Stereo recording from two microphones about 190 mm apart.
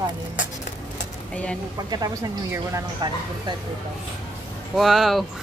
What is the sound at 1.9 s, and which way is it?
Speech, 20° right (ahead or behind).